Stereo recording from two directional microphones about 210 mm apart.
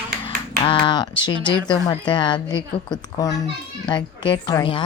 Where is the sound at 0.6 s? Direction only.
25° left (ahead or behind).